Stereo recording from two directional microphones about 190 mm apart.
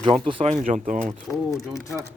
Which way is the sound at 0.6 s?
45° right (ahead or behind).